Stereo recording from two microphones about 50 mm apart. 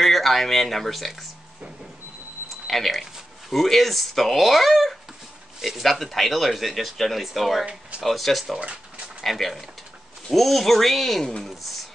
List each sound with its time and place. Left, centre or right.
0.0 s speech: centre
2.6 s speech: centre
8.5 s a sound: right
9.2 s speech: centre